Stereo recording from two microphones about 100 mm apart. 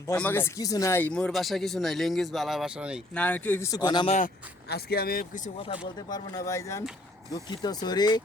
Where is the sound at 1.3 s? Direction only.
Centre (ahead or behind).